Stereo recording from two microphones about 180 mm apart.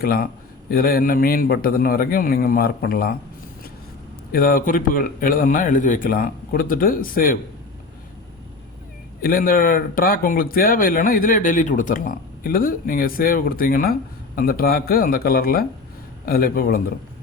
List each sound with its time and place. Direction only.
0.0 s a man's voice: 55° left (ahead or behind)
4.3 s speech: 55° left (ahead or behind)
9.2 s a man's voice: 55° left (ahead or behind)